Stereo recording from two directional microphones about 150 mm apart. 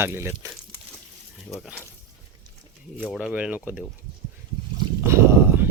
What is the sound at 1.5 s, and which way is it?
Speech, centre (ahead or behind).